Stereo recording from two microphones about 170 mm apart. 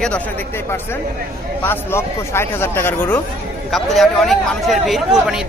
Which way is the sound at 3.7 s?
Centre (ahead or behind).